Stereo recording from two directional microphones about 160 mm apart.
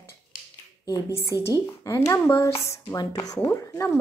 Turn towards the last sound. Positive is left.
turn(degrees=15)  # may be behind; listen again after turning